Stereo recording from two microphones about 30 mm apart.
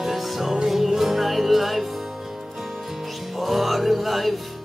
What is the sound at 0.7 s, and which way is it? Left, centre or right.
Music, centre.